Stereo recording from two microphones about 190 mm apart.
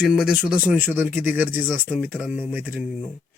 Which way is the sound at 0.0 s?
5° right (ahead or behind).